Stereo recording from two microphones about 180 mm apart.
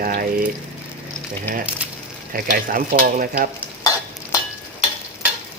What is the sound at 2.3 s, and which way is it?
Frying, 50° right (ahead or behind).